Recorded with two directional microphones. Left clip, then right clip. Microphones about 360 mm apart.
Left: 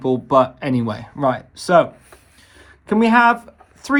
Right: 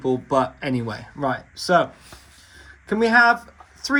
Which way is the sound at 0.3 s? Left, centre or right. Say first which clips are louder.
Left 9 dB; centre.